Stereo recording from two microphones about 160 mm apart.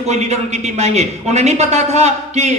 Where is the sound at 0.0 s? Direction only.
45° right (ahead or behind).